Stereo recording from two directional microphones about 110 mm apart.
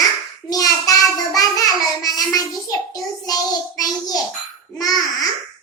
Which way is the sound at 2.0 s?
35° left (ahead or behind).